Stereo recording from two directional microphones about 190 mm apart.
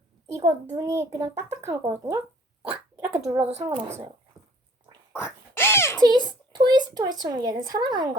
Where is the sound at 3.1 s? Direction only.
5° right (ahead or behind).